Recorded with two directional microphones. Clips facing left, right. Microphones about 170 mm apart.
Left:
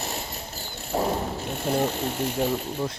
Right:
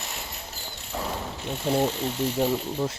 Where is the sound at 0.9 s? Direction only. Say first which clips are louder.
Left 7 dB; 45° left (ahead or behind).